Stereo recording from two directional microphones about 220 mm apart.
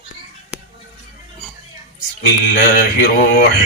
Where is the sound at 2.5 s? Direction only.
50° left (ahead or behind).